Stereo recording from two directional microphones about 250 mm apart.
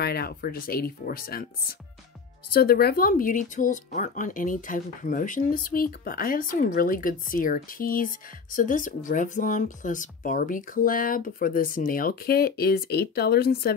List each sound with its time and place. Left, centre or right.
0.0 s speech: left